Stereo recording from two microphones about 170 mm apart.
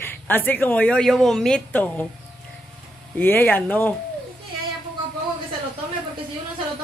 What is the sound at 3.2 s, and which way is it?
Speech, 10° left (ahead or behind).